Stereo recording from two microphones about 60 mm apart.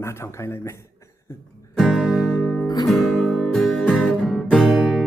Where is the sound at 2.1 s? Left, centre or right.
Centre.